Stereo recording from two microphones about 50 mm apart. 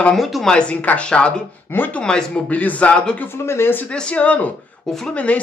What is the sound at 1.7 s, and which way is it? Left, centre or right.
Speech, left.